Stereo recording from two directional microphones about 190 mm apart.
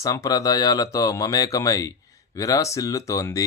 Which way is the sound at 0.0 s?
20° left (ahead or behind).